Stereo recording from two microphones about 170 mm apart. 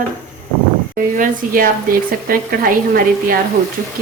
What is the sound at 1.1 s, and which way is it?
Speech, 55° right (ahead or behind).